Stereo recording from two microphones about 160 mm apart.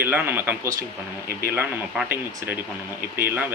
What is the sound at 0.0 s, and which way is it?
Speech, 10° right (ahead or behind).